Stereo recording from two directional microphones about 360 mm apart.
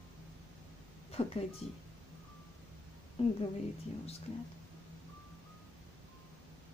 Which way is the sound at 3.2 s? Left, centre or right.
Centre.